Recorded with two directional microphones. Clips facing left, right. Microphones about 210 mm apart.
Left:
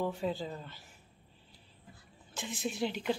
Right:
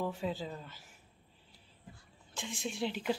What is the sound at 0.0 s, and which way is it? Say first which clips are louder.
Speech: left 2 dB; centre (ahead or behind).